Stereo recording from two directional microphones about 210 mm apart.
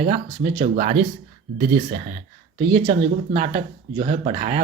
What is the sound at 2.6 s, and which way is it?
Speech, 30° right (ahead or behind).